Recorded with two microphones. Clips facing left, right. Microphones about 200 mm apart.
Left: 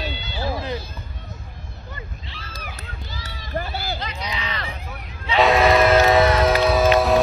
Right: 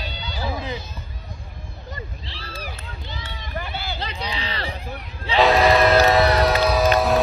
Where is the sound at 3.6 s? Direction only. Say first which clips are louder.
Left 4 dB; 40° left (ahead or behind).